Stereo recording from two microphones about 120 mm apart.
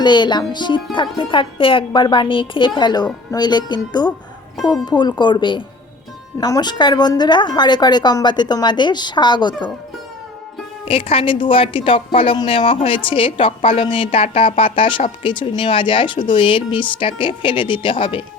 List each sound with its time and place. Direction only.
0.0 s a woman's voice: 40° left (ahead or behind)
10.8 s a woman's voice: 50° left (ahead or behind)